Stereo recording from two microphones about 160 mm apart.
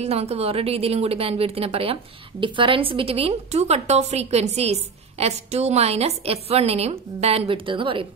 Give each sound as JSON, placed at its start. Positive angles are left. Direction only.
{"t": 0.0, "sound": "a woman's voice", "side_deg": -40}